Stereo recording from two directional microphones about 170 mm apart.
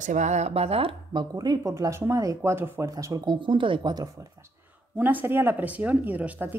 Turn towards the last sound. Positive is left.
turn(degrees=-10)  # may be behind; listen again after turning